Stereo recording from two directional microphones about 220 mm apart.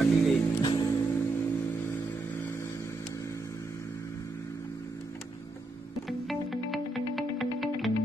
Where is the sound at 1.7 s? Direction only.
10° left (ahead or behind).